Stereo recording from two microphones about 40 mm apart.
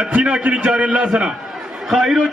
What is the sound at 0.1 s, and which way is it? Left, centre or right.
A man's voice, right.